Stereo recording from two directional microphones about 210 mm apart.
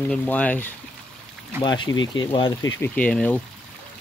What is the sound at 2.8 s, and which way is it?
Speech, 5° left (ahead or behind).